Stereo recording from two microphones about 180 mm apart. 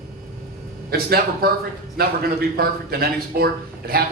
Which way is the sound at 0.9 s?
55° right (ahead or behind).